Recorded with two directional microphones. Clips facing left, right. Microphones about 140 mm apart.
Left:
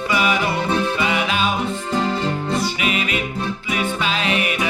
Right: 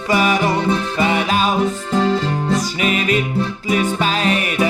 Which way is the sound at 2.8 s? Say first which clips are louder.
Right 4 dB; 40° right (ahead or behind).